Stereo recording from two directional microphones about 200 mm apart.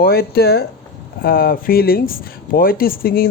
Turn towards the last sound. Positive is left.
turn(degrees=45)  # may be behind; listen again after turning